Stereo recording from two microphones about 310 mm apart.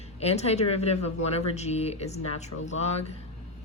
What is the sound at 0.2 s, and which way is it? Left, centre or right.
Speech, centre.